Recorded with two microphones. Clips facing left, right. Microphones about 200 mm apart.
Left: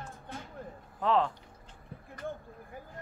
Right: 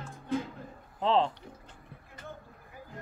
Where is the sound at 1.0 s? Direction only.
25° right (ahead or behind).